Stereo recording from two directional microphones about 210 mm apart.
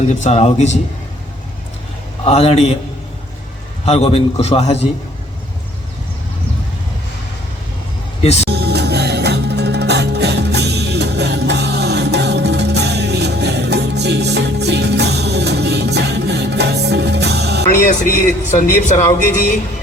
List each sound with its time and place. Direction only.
0.1 s speech: 35° left (ahead or behind)
2.2 s a man's voice: 30° left (ahead or behind)
3.8 s a man's voice: 30° left (ahead or behind)
8.2 s speech: 30° left (ahead or behind)
8.4 s music: 50° right (ahead or behind)
18.5 s speech: 35° left (ahead or behind)